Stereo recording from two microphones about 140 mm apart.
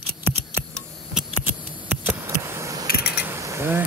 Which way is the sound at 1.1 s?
10° right (ahead or behind).